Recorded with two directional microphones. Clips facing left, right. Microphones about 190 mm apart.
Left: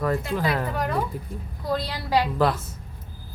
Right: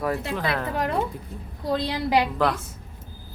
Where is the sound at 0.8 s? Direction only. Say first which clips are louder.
Right 1 dB; 25° right (ahead or behind).